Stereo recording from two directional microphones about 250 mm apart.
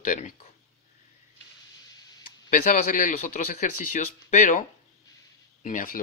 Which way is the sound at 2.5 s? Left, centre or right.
Left.